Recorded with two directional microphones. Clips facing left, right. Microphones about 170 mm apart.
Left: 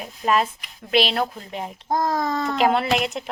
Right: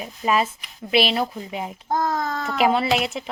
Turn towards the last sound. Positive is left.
turn(degrees=0)  # may be behind; listen again after turning